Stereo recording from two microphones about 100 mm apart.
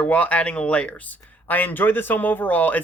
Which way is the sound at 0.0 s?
15° left (ahead or behind).